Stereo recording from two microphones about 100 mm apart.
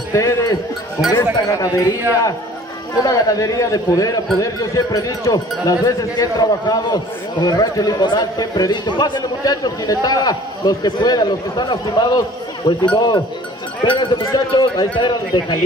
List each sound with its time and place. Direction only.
0.1 s speech: 30° left (ahead or behind)
3.0 s a man's voice: 35° left (ahead or behind)